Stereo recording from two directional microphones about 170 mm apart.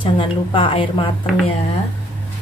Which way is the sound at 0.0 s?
30° left (ahead or behind).